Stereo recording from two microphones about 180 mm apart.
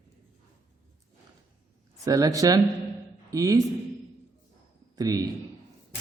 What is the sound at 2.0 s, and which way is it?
A man's voice, 20° right (ahead or behind).